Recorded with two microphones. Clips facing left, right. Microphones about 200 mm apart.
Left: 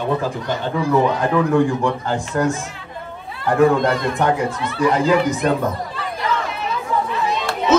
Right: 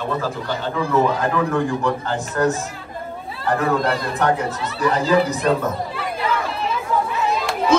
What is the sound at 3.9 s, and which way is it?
Speech, 35° right (ahead or behind).